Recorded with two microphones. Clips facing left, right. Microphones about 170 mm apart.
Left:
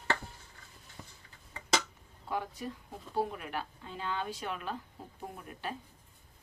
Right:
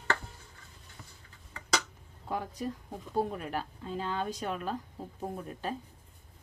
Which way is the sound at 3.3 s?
40° right (ahead or behind).